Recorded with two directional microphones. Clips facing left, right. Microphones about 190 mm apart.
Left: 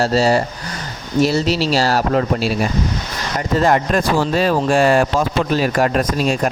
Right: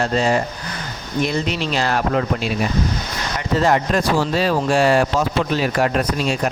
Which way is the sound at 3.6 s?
50° left (ahead or behind).